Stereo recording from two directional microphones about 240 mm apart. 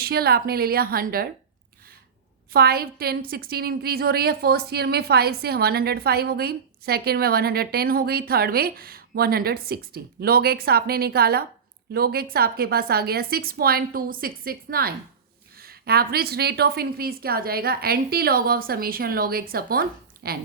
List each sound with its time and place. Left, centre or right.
0.0 s a woman's voice: right
2.5 s a woman's voice: right